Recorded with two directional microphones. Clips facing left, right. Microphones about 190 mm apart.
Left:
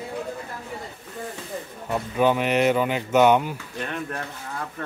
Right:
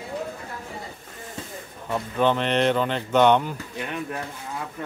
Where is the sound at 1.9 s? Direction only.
10° left (ahead or behind).